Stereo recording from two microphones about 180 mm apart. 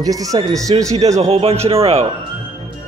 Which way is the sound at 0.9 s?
35° right (ahead or behind).